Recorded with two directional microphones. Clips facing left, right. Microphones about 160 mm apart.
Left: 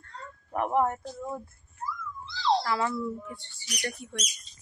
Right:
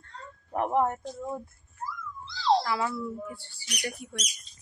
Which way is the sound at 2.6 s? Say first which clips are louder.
Left 1 dB; 5° right (ahead or behind).